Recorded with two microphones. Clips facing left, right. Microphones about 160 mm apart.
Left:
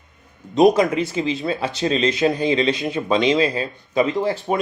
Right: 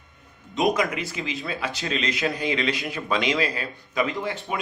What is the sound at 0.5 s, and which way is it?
Speech, 35° left (ahead or behind).